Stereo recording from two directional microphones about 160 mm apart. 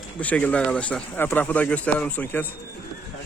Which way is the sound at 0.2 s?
10° left (ahead or behind).